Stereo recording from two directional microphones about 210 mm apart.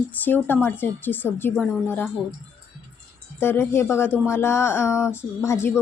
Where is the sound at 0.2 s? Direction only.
10° left (ahead or behind).